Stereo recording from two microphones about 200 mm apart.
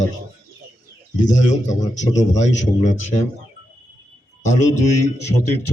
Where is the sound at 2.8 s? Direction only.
35° left (ahead or behind).